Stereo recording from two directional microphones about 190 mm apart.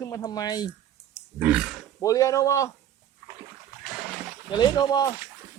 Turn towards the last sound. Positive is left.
turn(degrees=20)  # may be behind; listen again after turning